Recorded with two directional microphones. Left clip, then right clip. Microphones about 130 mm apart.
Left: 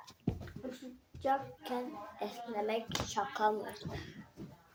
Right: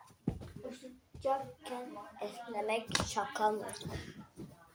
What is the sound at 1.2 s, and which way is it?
Speech, 60° left (ahead or behind).